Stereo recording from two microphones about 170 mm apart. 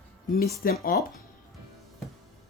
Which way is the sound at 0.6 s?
60° left (ahead or behind).